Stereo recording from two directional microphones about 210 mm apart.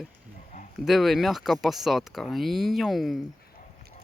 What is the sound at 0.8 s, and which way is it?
Speech, centre (ahead or behind).